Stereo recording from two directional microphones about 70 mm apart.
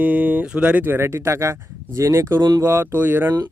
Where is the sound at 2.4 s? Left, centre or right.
Right.